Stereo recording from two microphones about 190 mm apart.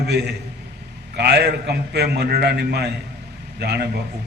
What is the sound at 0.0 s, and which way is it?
A man's voice, 60° right (ahead or behind).